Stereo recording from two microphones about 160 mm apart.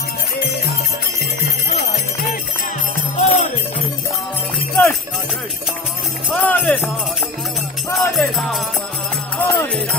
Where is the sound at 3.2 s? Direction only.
45° left (ahead or behind).